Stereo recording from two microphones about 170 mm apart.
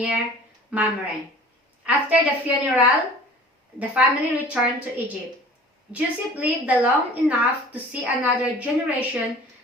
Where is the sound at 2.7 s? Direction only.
10° right (ahead or behind).